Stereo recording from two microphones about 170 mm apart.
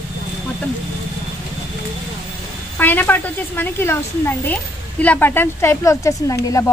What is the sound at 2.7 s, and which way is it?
A woman's voice, 10° left (ahead or behind).